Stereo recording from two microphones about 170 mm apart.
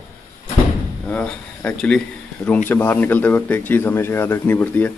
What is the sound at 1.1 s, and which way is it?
Speech, 5° left (ahead or behind).